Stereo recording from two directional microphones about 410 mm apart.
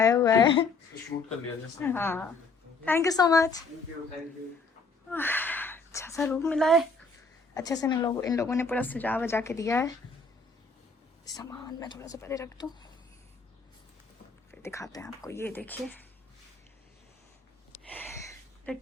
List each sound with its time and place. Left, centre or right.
0.0 s speech: centre
1.8 s speech: centre
5.1 s speech: centre
11.3 s speech: centre
14.5 s speech: centre
18.7 s speech: centre